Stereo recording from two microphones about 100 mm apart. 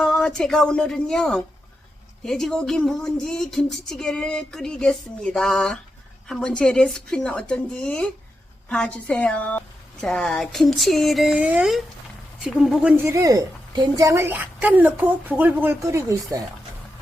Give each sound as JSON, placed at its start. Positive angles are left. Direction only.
{"t": 0.0, "sound": "a woman's voice", "side_deg": 5}
{"t": 13.0, "sound": "a woman's voice", "side_deg": -30}
{"t": 15.8, "sound": "speech", "side_deg": -30}